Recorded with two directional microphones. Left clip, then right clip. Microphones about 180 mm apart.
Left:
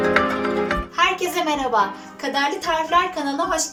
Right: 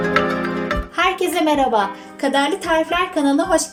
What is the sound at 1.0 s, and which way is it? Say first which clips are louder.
A woman's voice: right 2 dB; 40° right (ahead or behind).